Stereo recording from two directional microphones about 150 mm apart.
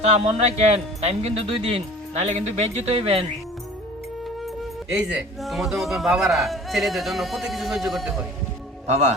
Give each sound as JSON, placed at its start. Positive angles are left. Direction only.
{"t": 0.0, "sound": "speech", "side_deg": -45}
{"t": 4.9, "sound": "a man's voice", "side_deg": -5}
{"t": 8.9, "sound": "speech", "side_deg": -50}